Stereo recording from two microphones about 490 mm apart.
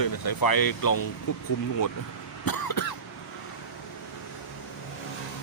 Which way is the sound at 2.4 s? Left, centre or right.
Left.